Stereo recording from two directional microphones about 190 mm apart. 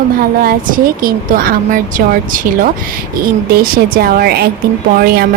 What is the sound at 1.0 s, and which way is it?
A woman's voice, 50° right (ahead or behind).